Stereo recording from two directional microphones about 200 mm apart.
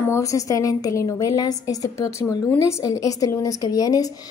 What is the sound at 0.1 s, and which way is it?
A woman's voice, 15° left (ahead or behind).